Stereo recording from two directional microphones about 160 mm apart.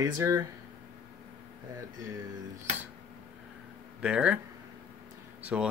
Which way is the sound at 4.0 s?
5° right (ahead or behind).